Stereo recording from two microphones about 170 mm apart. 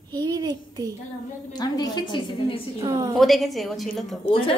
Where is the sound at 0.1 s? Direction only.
25° right (ahead or behind).